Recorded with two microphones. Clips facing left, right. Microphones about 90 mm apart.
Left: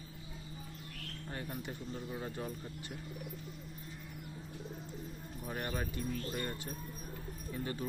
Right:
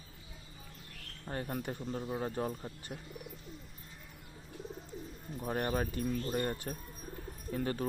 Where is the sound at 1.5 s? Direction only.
50° right (ahead or behind).